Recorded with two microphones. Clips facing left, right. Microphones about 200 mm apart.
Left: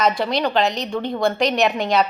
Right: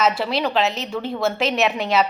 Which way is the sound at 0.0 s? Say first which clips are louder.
Left 1 dB; 5° right (ahead or behind).